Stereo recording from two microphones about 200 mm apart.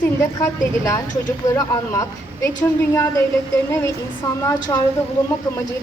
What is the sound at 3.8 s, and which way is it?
Speech, 15° left (ahead or behind).